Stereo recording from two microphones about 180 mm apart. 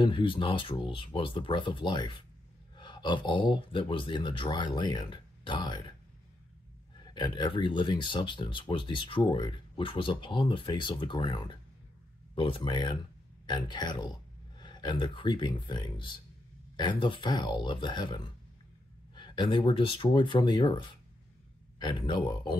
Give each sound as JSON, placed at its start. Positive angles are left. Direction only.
{"t": 0.0, "sound": "speech", "side_deg": 30}
{"t": 7.0, "sound": "speech", "side_deg": 25}